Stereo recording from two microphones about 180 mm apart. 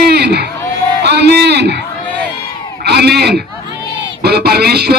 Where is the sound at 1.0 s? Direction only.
65° right (ahead or behind).